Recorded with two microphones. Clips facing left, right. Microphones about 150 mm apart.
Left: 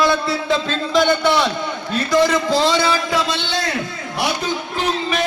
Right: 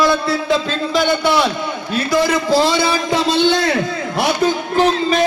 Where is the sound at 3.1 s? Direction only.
30° right (ahead or behind).